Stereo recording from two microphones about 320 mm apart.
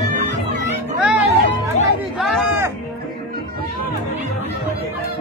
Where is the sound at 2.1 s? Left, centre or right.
Centre.